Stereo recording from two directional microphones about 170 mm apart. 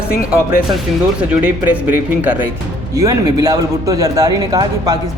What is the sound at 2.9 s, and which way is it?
Speech, 20° right (ahead or behind).